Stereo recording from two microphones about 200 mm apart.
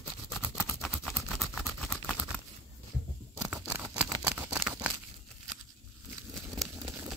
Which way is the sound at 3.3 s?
5° right (ahead or behind).